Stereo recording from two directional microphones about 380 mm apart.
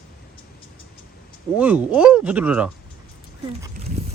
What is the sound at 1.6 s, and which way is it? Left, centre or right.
Speech, centre.